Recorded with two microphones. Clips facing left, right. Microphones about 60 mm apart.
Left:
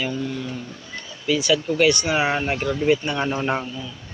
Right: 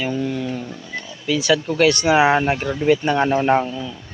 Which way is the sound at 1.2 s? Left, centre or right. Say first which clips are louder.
Right 2 dB; right.